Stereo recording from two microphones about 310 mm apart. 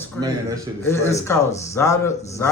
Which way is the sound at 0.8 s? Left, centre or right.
Centre.